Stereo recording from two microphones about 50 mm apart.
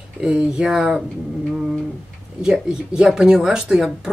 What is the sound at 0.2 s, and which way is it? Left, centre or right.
Speech, centre.